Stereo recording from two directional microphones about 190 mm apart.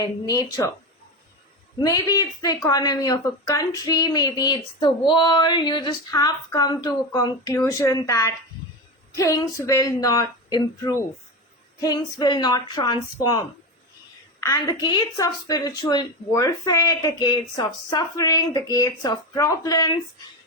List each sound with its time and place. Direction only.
0.0 s speech: 20° left (ahead or behind)
1.8 s speech: 20° left (ahead or behind)
14.4 s speech: 20° left (ahead or behind)